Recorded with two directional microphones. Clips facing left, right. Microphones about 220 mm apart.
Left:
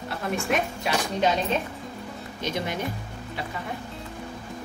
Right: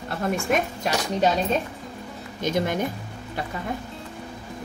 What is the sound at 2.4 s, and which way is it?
Speech, 50° right (ahead or behind).